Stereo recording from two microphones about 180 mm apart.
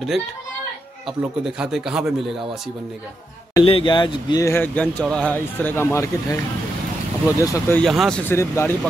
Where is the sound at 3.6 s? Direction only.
30° left (ahead or behind).